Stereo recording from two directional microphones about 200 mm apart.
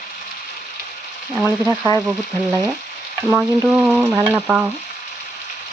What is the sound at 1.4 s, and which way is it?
Frying, 10° right (ahead or behind).